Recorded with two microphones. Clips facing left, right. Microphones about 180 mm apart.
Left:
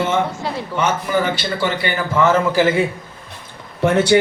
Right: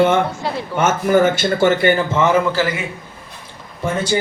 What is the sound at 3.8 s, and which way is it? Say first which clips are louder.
Speech: left 6 dB; 70° left (ahead or behind).